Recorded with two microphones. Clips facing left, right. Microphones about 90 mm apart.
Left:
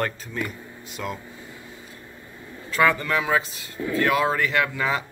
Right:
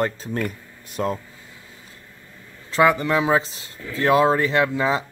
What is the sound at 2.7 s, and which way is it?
Speech, 20° right (ahead or behind).